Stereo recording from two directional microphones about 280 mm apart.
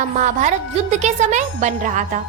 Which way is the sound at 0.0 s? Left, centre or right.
Right.